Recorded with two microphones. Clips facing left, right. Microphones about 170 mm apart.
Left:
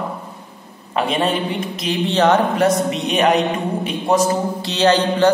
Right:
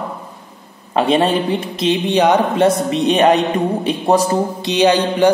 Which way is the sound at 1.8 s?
15° right (ahead or behind).